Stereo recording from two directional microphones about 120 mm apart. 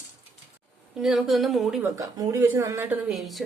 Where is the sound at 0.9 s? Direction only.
5° right (ahead or behind).